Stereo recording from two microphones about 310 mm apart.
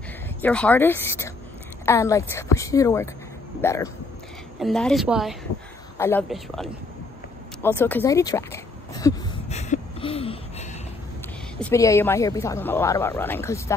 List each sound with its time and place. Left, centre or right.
0.4 s a woman's voice: centre
9.5 s a sound: left
11.6 s speech: centre